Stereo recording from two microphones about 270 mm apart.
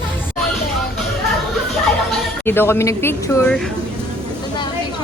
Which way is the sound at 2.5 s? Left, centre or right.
Centre.